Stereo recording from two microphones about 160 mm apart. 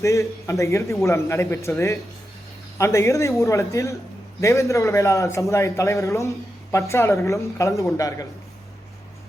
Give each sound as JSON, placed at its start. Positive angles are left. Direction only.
{"t": 0.0, "sound": "a man's voice", "side_deg": 20}